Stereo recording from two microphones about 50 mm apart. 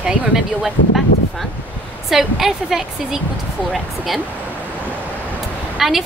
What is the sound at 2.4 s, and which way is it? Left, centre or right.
Speech, centre.